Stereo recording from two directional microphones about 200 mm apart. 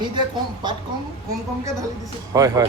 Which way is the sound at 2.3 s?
15° right (ahead or behind).